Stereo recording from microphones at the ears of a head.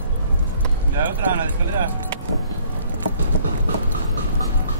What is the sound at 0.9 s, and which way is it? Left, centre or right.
Speech, right.